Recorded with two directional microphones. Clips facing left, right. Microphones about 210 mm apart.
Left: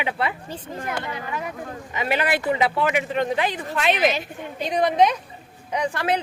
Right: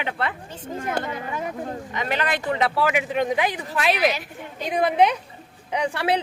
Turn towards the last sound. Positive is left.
turn(degrees=-10)  # may be behind; listen again after turning